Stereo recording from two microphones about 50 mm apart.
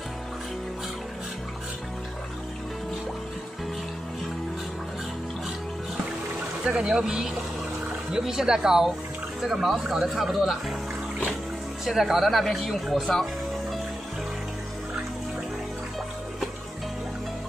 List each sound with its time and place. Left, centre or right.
6.6 s speech: centre
11.8 s speech: centre